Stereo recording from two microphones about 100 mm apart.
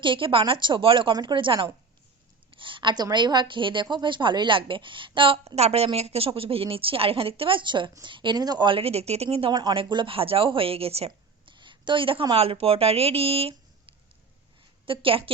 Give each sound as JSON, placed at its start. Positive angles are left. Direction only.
{"t": 0.0, "sound": "a woman's voice", "side_deg": -60}
{"t": 1.1, "sound": "a woman's voice", "side_deg": -50}
{"t": 5.5, "sound": "a woman's voice", "side_deg": -90}
{"t": 9.5, "sound": "a woman's voice", "side_deg": -45}
{"t": 9.7, "sound": "a woman's voice", "side_deg": -60}
{"t": 11.4, "sound": "a sound", "side_deg": -55}
{"t": 12.3, "sound": "a woman's voice", "side_deg": -70}
{"t": 14.8, "sound": "a woman's voice", "side_deg": -65}